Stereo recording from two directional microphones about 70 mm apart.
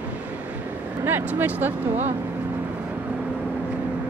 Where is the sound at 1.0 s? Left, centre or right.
Right.